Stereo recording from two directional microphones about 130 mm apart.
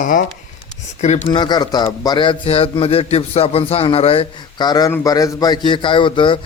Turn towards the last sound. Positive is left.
turn(degrees=40)  # may be behind; listen again after turning